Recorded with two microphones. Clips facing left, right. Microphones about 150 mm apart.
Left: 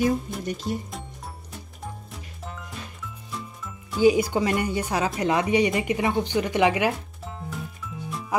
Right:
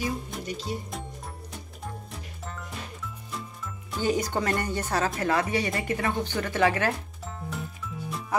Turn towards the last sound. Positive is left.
turn(degrees=15)  # may be behind; listen again after turning